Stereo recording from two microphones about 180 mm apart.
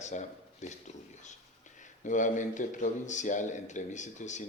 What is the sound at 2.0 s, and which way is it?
Speech, 45° left (ahead or behind).